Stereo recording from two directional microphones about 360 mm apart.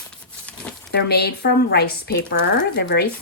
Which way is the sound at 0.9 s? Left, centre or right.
Left.